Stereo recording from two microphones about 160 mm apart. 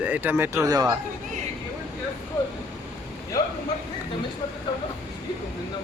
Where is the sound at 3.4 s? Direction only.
20° left (ahead or behind).